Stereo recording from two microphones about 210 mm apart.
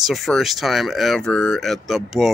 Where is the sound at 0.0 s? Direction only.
Centre (ahead or behind).